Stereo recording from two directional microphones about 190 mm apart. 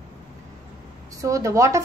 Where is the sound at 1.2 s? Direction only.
15° right (ahead or behind).